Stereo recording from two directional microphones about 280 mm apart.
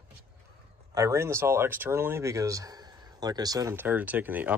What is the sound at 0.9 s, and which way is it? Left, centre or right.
Speech, centre.